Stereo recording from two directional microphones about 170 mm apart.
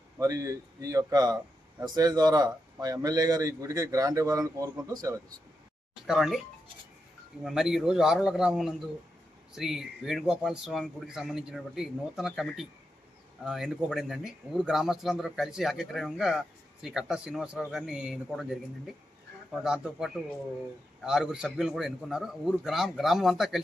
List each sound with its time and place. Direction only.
0.2 s speech: 20° right (ahead or behind)
6.1 s speech: centre (ahead or behind)
7.4 s speech: 5° right (ahead or behind)